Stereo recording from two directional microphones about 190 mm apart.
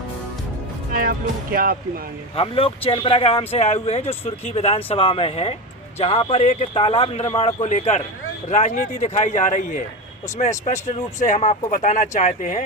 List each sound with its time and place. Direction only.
0.9 s speech: 50° right (ahead or behind)
2.3 s speech: 30° left (ahead or behind)